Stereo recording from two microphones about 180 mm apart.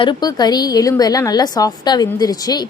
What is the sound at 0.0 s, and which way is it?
A woman's voice, 25° left (ahead or behind).